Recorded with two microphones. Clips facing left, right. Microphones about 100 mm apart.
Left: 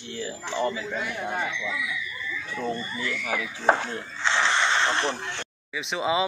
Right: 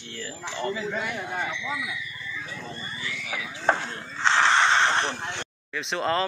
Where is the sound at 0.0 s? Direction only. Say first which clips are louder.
Left 3 dB; 10° left (ahead or behind).